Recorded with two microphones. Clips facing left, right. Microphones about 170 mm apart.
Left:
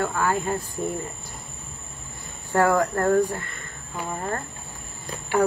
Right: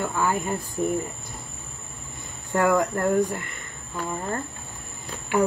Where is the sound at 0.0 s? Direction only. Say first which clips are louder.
Left 1 dB; 10° right (ahead or behind).